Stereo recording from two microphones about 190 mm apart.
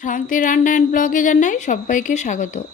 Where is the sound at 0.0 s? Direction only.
45° left (ahead or behind).